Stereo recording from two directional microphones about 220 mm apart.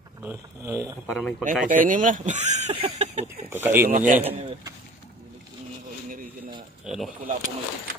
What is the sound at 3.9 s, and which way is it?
Speech, 35° right (ahead or behind).